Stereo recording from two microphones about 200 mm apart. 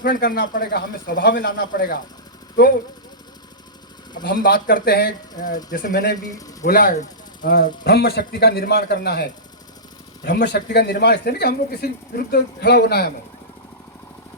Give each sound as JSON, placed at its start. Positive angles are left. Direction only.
{"t": 0.0, "sound": "speech", "side_deg": 45}
{"t": 4.2, "sound": "speech", "side_deg": 50}